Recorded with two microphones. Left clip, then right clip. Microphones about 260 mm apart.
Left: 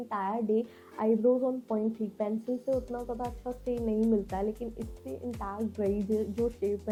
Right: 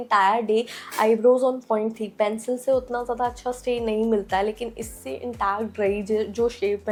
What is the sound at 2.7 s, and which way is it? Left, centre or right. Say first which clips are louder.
Speech: right 11 dB; right.